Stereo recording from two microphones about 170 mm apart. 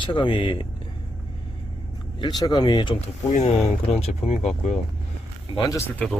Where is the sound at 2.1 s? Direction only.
25° left (ahead or behind).